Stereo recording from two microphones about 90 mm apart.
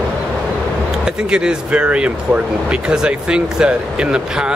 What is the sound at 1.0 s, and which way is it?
Speech, 10° right (ahead or behind).